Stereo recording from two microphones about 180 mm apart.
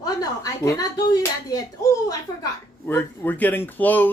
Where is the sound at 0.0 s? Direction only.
20° left (ahead or behind).